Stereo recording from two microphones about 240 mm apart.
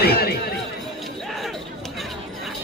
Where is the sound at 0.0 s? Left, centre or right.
Left.